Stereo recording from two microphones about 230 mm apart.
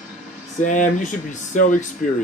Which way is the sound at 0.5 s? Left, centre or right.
Left.